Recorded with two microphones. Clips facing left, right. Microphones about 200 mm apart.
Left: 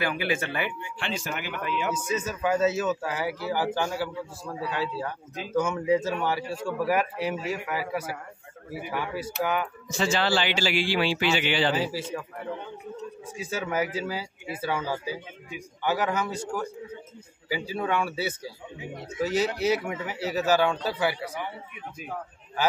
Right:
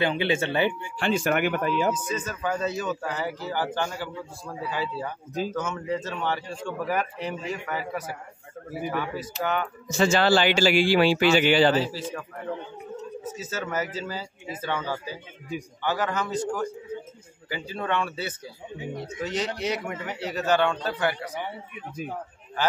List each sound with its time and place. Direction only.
0.0 s speech: 25° right (ahead or behind)
1.0 s speech: 55° right (ahead or behind)
1.6 s a man's voice: 40° right (ahead or behind)
2.0 s a man's voice: 10° left (ahead or behind)
5.5 s a man's voice: 10° left (ahead or behind)
8.9 s a man's voice: 10° left (ahead or behind)
9.8 s a man's voice: 45° right (ahead or behind)
11.8 s a man's voice: 10° left (ahead or behind)
13.4 s a man's voice: 10° left (ahead or behind)